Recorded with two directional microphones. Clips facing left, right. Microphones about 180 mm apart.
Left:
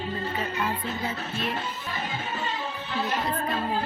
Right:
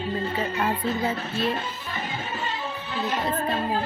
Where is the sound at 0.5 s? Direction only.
45° right (ahead or behind).